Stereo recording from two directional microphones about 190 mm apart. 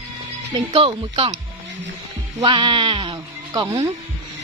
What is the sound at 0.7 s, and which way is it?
Speech, 30° right (ahead or behind).